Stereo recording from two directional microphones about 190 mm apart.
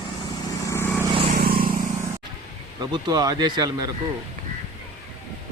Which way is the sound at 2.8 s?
20° right (ahead or behind).